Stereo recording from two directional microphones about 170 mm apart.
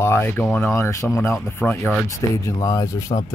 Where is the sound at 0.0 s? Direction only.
15° left (ahead or behind).